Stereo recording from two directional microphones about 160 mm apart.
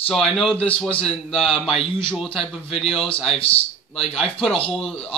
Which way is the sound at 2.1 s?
Centre (ahead or behind).